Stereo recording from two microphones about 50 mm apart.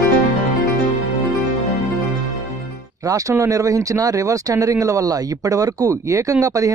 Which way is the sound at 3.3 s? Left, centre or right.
Right.